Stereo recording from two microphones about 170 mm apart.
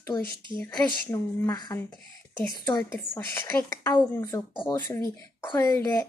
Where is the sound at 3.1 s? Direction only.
10° left (ahead or behind).